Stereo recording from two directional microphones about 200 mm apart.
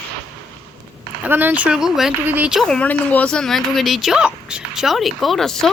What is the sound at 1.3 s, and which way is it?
Speech, 10° right (ahead or behind).